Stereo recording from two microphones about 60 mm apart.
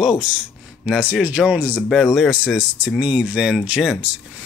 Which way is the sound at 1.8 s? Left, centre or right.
Centre.